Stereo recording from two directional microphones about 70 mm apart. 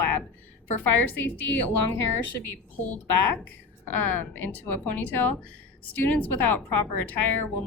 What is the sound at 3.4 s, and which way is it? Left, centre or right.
A woman's voice, left.